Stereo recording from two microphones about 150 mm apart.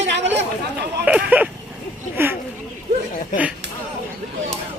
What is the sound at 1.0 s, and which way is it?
Speech, 10° right (ahead or behind).